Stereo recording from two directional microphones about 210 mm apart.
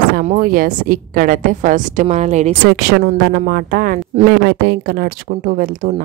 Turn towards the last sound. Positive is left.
turn(degrees=-45)  # may be behind; listen again after turning